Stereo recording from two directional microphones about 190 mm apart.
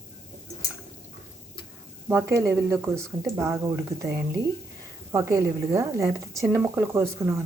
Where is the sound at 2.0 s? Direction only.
15° right (ahead or behind).